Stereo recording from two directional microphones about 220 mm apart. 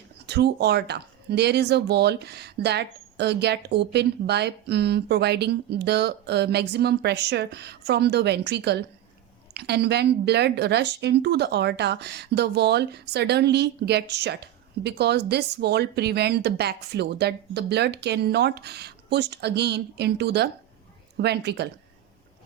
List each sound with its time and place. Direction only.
0.3 s a woman's voice: 50° right (ahead or behind)